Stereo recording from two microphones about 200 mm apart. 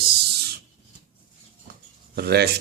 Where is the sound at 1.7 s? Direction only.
50° right (ahead or behind).